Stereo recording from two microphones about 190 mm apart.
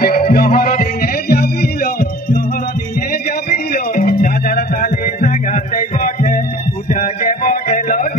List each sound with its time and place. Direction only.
0.0 s music: 50° left (ahead or behind)
3.1 s music: 50° left (ahead or behind)